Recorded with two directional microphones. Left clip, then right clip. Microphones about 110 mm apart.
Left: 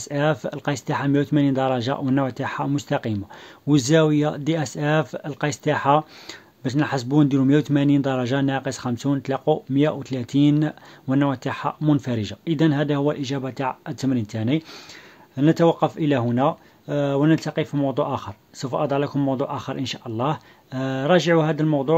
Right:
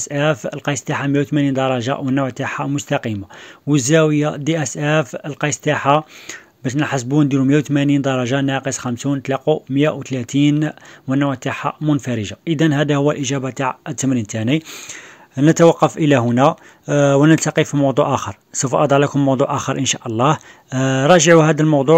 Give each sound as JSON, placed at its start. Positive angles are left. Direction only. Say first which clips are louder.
{"t": 0.0, "sound": "speech", "louder": "right 4 dB", "side_deg": -15}